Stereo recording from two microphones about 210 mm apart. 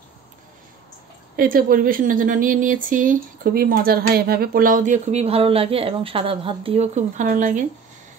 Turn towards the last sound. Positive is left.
turn(degrees=-35)  # may be behind; listen again after turning